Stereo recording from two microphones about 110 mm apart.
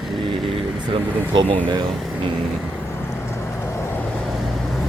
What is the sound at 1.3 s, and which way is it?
Speech, 45° right (ahead or behind).